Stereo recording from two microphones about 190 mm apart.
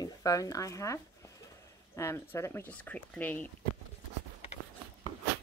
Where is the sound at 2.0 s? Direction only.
15° left (ahead or behind).